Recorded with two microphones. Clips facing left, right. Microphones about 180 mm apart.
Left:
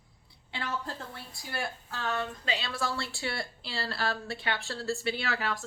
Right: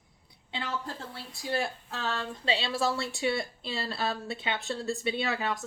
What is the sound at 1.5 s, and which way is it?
Speech, 25° right (ahead or behind).